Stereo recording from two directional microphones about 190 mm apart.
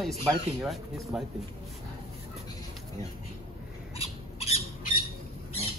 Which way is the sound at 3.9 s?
30° left (ahead or behind).